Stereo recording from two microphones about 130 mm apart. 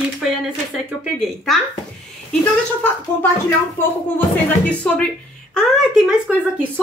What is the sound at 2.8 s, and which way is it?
Speech, 15° left (ahead or behind).